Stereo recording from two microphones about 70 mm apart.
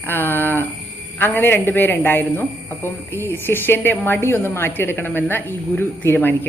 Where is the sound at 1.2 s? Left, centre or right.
Left.